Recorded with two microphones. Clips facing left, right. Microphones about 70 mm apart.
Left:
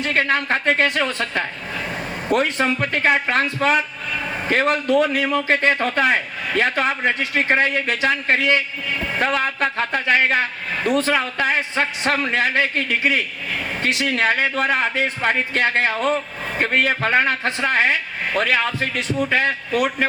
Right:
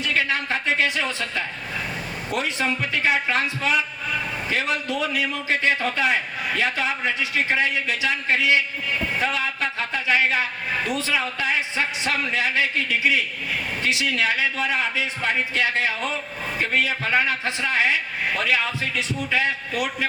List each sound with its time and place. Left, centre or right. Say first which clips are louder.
0.0 s a man's voice: left 4 dB; left